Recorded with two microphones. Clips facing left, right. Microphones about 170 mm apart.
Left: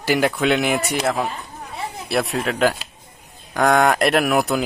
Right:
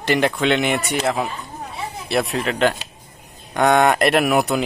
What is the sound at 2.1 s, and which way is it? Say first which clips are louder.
Speech: right 1 dB; centre (ahead or behind).